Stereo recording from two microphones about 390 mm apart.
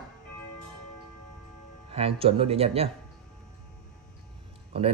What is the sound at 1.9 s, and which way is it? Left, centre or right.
Speech, centre.